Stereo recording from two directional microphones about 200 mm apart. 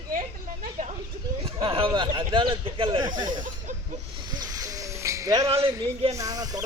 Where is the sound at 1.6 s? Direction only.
25° right (ahead or behind).